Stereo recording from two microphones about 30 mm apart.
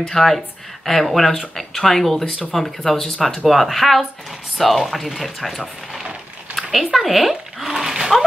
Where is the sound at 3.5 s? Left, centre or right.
Centre.